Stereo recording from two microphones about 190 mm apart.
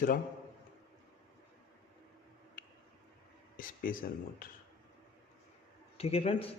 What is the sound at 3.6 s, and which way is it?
Speech, 45° left (ahead or behind).